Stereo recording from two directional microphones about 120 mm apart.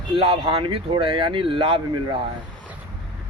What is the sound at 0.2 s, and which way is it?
Speech, 50° right (ahead or behind).